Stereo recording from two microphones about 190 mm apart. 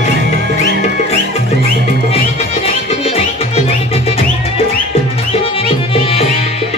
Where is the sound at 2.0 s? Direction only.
30° left (ahead or behind).